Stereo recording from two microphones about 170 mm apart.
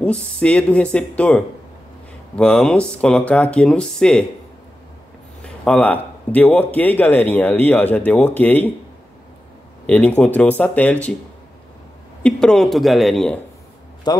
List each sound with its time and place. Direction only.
0.0 s a man's voice: 5° left (ahead or behind)
5.4 s a man's voice: 5° left (ahead or behind)
9.8 s a man's voice: 10° left (ahead or behind)
12.2 s speech: 5° left (ahead or behind)
14.1 s a man's voice: 25° left (ahead or behind)